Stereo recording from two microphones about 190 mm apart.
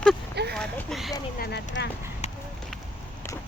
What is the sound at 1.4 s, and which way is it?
Speech, 60° left (ahead or behind).